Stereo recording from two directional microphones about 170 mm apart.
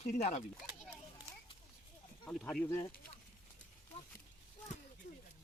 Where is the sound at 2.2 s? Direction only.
10° left (ahead or behind).